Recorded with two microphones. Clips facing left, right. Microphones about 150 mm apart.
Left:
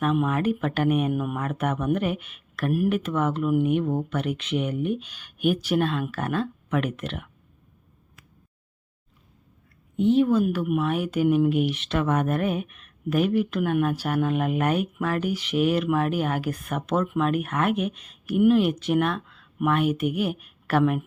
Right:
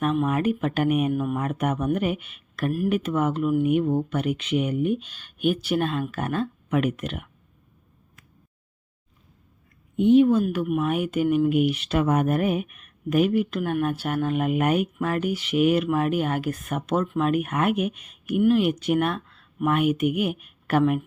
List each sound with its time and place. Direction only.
0.3 s speech: 5° right (ahead or behind)
1.4 s speech: 10° right (ahead or behind)
10.1 s speech: 10° right (ahead or behind)
10.6 s speech: 5° left (ahead or behind)
10.8 s speech: 5° right (ahead or behind)